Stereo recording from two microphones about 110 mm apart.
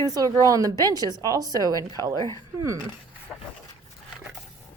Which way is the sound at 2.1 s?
30° left (ahead or behind).